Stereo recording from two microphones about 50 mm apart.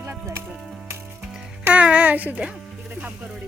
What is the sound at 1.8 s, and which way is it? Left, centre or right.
Speech, right.